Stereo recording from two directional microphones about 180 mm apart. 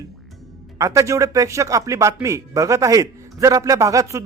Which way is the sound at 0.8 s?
15° right (ahead or behind).